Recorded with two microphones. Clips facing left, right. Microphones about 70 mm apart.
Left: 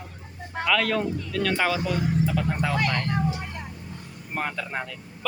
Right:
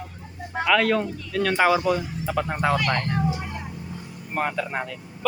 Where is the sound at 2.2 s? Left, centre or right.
Right.